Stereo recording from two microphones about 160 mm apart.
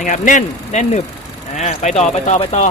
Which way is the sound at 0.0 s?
50° left (ahead or behind).